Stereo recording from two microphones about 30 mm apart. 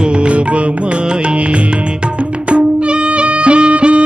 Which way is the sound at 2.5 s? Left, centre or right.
Right.